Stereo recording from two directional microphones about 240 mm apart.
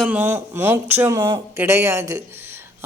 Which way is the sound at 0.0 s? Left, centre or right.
Centre.